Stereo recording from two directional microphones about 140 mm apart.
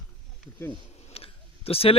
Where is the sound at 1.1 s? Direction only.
45° left (ahead or behind).